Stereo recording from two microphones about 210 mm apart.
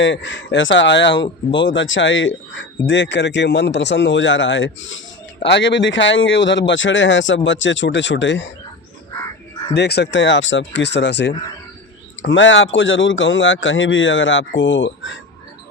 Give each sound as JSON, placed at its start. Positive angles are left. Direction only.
{"t": 0.0, "sound": "speech", "side_deg": 60}
{"t": 9.7, "sound": "speech", "side_deg": 50}